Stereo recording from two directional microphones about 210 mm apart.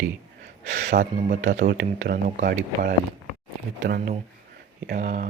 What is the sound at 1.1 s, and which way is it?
Speech, 35° right (ahead or behind).